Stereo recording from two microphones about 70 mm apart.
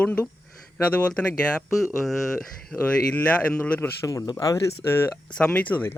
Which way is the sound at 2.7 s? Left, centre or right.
Centre.